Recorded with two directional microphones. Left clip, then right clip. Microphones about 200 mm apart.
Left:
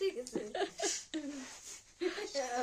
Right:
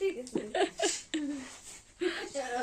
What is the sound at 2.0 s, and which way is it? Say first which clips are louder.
Speech: right 4 dB; 15° left (ahead or behind).